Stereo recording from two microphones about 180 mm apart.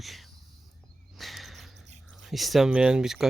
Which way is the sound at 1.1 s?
Centre (ahead or behind).